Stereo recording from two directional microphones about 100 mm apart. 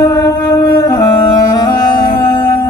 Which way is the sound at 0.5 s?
40° left (ahead or behind).